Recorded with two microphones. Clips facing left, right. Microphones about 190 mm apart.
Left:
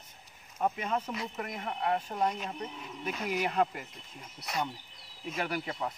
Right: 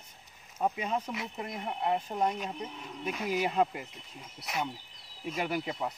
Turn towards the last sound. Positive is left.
turn(degrees=-20)  # may be behind; listen again after turning